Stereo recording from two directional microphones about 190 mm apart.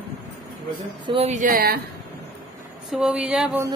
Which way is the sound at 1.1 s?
35° right (ahead or behind).